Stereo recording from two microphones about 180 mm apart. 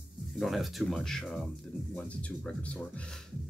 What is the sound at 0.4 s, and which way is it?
Speech, centre (ahead or behind).